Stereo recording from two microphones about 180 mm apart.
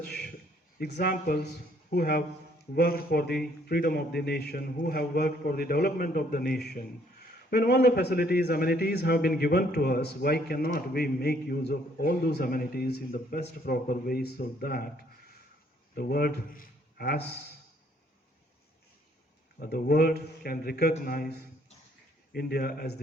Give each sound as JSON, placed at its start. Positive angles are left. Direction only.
{"t": 0.8, "sound": "speech", "side_deg": 65}
{"t": 16.0, "sound": "speech", "side_deg": 60}
{"t": 19.5, "sound": "speech", "side_deg": 55}